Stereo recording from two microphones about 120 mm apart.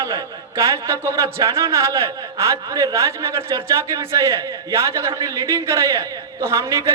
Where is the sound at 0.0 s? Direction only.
25° right (ahead or behind).